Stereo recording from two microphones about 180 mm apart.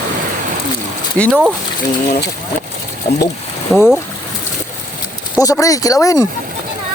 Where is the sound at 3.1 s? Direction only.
55° left (ahead or behind).